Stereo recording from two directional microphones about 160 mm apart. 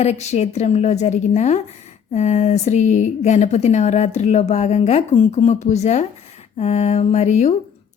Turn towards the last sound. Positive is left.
turn(degrees=45)  # may be behind; listen again after turning